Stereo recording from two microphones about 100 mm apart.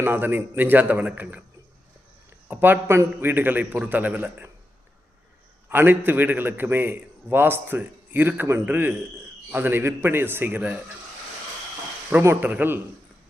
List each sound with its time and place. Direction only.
0.0 s a man's voice: 20° right (ahead or behind)
2.5 s a man's voice: 20° right (ahead or behind)
5.6 s a man's voice: 20° right (ahead or behind)
12.2 s a man's voice: 20° right (ahead or behind)